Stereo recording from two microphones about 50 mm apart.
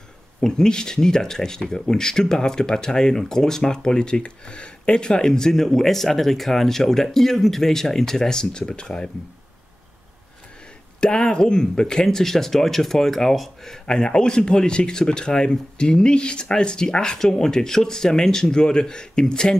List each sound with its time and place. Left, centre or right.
0.4 s speech: centre
11.0 s speech: centre
13.8 s speech: centre